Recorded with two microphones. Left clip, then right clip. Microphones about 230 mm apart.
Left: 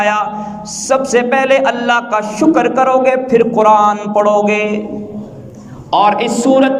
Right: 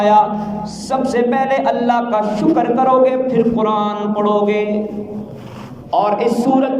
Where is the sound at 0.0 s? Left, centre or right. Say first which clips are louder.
Right 2 dB; left.